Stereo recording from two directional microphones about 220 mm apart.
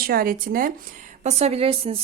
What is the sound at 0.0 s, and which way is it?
A woman's voice, 45° right (ahead or behind).